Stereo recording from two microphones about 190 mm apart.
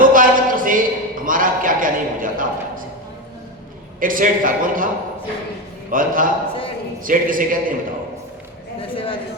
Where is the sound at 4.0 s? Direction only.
45° right (ahead or behind).